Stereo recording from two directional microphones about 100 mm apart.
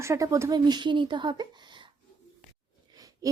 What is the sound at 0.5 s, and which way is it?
A woman's voice, 50° right (ahead or behind).